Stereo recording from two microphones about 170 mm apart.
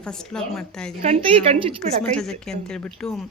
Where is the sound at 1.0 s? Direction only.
35° right (ahead or behind).